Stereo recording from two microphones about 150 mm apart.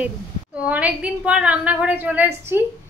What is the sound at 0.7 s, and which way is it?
A man's voice, 10° right (ahead or behind).